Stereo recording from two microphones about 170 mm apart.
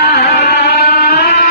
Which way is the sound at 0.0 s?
75° left (ahead or behind).